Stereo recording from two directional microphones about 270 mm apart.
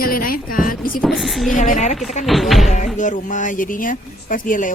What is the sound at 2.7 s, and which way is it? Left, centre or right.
Speech, left.